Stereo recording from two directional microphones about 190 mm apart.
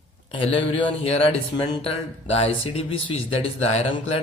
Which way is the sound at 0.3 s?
30° left (ahead or behind).